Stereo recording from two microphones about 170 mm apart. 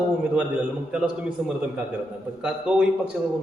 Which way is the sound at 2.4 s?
5° right (ahead or behind).